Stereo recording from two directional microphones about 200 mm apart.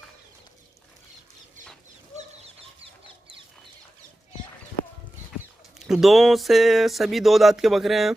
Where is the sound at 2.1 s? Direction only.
30° right (ahead or behind).